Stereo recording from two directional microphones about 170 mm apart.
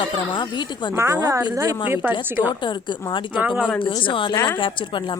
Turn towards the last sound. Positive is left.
turn(degrees=30)  # may be behind; listen again after turning